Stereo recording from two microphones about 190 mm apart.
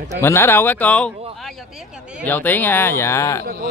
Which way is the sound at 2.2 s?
10° left (ahead or behind).